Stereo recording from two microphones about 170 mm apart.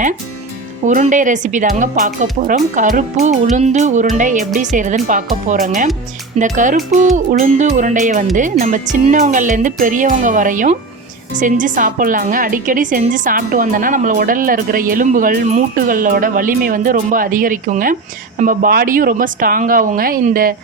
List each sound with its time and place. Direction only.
0.9 s a woman's voice: 45° right (ahead or behind)